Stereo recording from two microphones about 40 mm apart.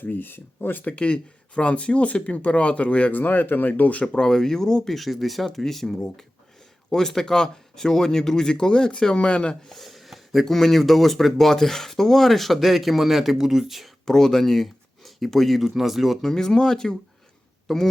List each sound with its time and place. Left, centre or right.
0.0 s speech: left
0.9 s speech: left
3.1 s speech: left
4.0 s speech: centre
4.9 s speech: centre; by 9.6 s left
9.6 s a sound: centre
10.4 s speech: centre
14.0 s speech: centre
16.2 s speech: centre
17.7 s speech: centre